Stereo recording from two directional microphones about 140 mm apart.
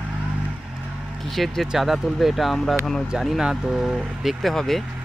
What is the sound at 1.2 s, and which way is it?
Speech, centre (ahead or behind).